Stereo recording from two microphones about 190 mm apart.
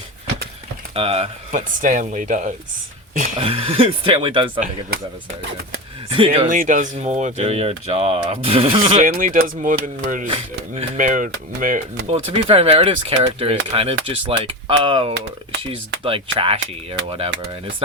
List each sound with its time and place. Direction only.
0.9 s speech: 30° right (ahead or behind)
1.8 s speech: 40° right (ahead or behind)
3.3 s speech: 30° right (ahead or behind)
6.1 s speech: 30° right (ahead or behind)
6.5 s speech: 45° right (ahead or behind)
9.0 s speech: 45° right (ahead or behind)
12.1 s speech: 30° right (ahead or behind)